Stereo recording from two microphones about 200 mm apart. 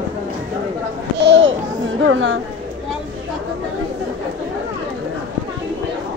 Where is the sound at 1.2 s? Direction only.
60° right (ahead or behind).